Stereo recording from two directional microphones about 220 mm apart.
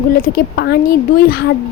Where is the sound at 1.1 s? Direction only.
40° left (ahead or behind).